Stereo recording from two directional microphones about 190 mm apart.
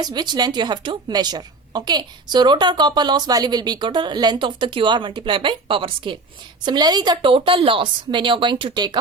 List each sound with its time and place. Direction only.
0.0 s a woman's voice: 20° right (ahead or behind)